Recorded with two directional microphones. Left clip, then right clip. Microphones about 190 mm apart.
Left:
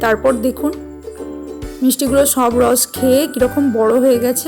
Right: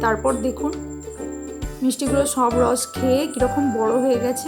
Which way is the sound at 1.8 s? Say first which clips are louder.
Left 7 dB; 30° left (ahead or behind).